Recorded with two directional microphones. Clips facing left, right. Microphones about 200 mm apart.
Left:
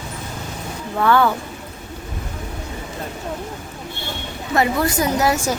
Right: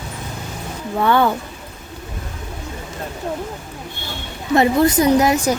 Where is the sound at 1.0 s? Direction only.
20° right (ahead or behind).